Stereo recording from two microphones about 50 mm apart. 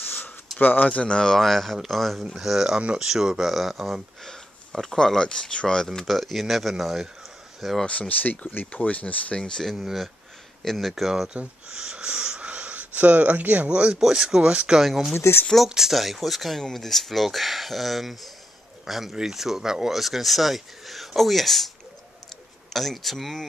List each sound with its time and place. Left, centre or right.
0.6 s speech: left
0.8 s speech: left; by 4.0 s centre
4.2 s speech: centre
6.0 s speech: centre
7.8 s speech: left
8.1 s speech: left
9.4 s speech: centre
11.2 s speech: centre
13.9 s speech: centre
14.5 s speech: right
14.8 s speech: centre
15.1 s speech: left
15.7 s speech: centre